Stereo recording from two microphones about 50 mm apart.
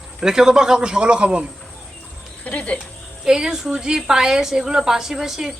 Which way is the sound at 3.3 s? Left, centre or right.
Centre.